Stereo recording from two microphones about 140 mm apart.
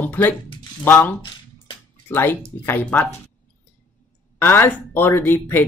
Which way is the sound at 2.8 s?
5° left (ahead or behind).